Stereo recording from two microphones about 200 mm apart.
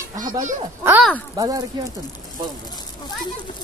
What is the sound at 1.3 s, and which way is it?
Speech, 20° right (ahead or behind).